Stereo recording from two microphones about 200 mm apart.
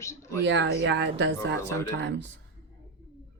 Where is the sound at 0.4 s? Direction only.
65° right (ahead or behind).